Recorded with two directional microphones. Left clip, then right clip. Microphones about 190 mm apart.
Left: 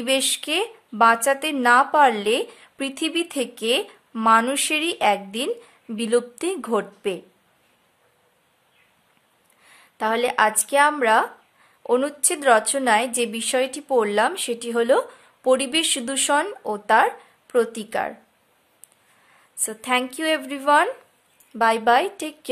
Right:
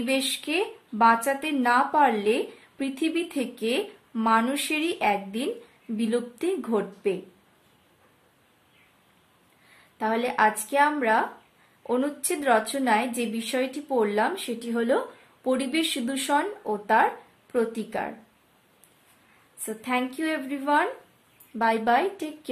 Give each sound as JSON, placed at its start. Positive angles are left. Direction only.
{"t": 0.0, "sound": "a woman's voice", "side_deg": 45}
{"t": 9.9, "sound": "a woman's voice", "side_deg": 45}
{"t": 19.6, "sound": "a woman's voice", "side_deg": 45}